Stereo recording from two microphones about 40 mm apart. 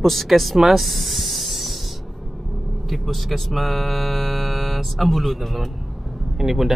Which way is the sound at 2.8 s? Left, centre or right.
Centre.